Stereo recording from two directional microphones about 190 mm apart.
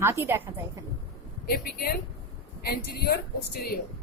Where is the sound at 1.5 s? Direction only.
55° left (ahead or behind).